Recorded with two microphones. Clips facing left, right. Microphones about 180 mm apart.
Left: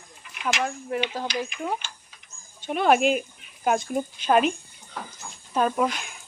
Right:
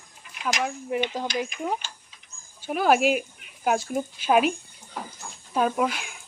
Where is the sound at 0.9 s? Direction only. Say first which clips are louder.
Right 2 dB; 15° right (ahead or behind).